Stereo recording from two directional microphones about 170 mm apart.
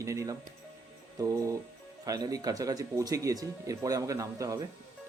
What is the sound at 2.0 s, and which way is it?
Speech, 20° right (ahead or behind).